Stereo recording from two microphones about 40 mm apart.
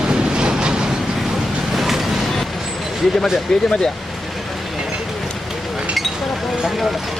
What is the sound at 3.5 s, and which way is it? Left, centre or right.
Speech, centre.